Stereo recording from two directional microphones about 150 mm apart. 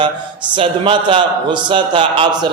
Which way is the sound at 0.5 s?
35° right (ahead or behind).